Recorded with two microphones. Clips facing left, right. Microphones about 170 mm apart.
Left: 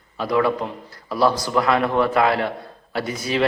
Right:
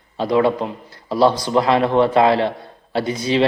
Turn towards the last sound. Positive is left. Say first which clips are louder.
# right 5 dB
turn(degrees=-25)  # may be behind; listen again after turning